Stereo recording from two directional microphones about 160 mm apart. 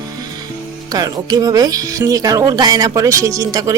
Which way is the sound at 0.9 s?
25° right (ahead or behind).